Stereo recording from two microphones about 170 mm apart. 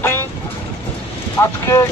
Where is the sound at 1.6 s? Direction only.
15° left (ahead or behind).